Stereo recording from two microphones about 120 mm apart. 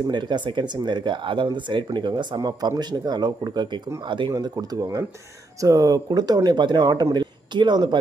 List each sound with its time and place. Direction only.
0.0 s speech: 40° right (ahead or behind)